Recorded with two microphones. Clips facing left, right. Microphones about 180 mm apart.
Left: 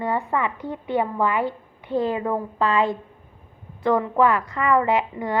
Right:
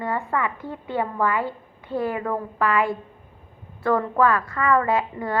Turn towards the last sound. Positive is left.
turn(degrees=20)  # may be behind; listen again after turning